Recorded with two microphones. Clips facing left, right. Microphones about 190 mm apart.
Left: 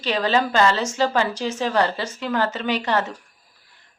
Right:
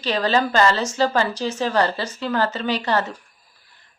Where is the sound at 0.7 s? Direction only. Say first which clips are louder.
Even; 35° right (ahead or behind).